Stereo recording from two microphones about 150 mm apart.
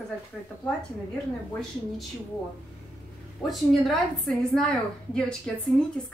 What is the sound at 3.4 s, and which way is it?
A woman's voice, centre (ahead or behind).